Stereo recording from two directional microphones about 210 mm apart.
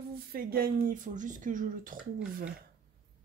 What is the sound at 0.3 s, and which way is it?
Speech, 45° right (ahead or behind).